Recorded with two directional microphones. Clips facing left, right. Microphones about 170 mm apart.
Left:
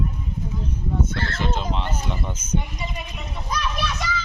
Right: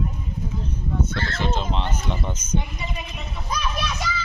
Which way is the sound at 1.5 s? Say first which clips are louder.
Even; 10° left (ahead or behind).